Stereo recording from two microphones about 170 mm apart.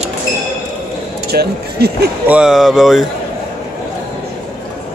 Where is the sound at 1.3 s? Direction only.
65° right (ahead or behind).